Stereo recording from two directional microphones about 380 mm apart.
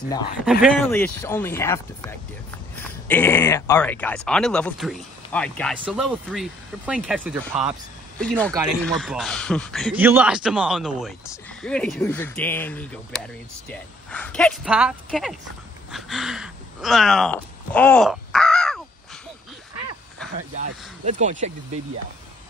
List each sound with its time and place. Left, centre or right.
0.5 s speech: centre
20.3 s speech: centre